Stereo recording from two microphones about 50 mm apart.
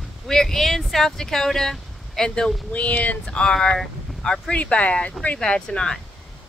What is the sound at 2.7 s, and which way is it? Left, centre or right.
Speech, left.